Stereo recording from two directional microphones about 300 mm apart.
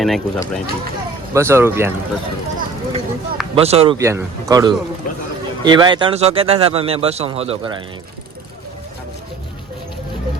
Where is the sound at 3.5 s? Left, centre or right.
Centre.